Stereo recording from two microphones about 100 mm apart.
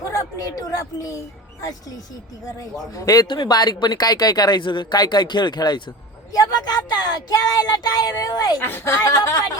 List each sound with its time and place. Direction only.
0.0 s speech: 30° left (ahead or behind)
2.9 s speech: 35° left (ahead or behind)
3.2 s speech: 45° left (ahead or behind)
8.6 s speech: 25° left (ahead or behind)